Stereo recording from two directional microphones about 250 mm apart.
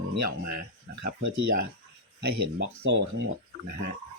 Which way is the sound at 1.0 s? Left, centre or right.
Right.